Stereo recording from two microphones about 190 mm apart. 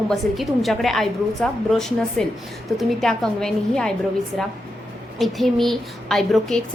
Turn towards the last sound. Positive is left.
turn(degrees=0)  # may be behind; listen again after turning